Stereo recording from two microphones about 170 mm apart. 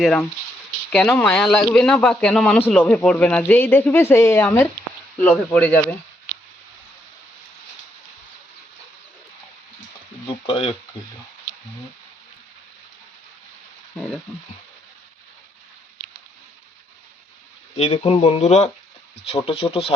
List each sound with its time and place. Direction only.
0.0 s speech: 5° left (ahead or behind)
10.2 s speech: 30° left (ahead or behind)
17.7 s speech: 35° left (ahead or behind)